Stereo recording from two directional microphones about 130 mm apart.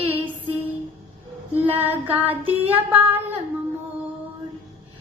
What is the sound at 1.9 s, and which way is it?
Music, 15° right (ahead or behind).